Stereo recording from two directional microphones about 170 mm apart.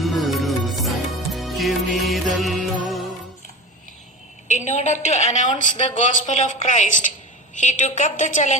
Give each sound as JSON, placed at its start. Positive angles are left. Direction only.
{"t": 0.0, "sound": "music", "side_deg": 0}
{"t": 4.4, "sound": "a woman's voice", "side_deg": 45}